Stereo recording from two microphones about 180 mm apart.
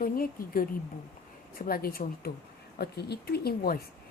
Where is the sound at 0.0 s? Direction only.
55° left (ahead or behind).